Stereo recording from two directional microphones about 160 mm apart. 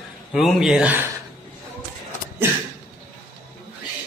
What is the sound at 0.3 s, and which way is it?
Speech, centre (ahead or behind).